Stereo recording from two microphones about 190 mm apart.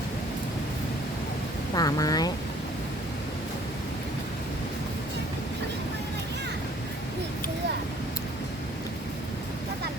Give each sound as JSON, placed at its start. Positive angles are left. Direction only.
{"t": 1.7, "sound": "speech", "side_deg": 20}